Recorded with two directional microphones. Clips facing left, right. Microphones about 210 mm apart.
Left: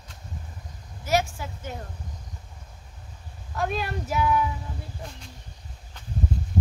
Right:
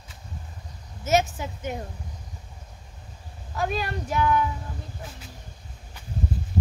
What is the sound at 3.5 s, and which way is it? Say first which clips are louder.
Speech: even; centre (ahead or behind).